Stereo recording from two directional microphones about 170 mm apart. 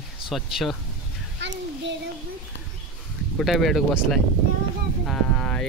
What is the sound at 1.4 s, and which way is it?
Speech, 90° right.